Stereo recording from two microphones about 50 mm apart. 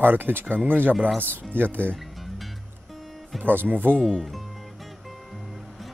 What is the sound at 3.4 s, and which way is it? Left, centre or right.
Speech, right.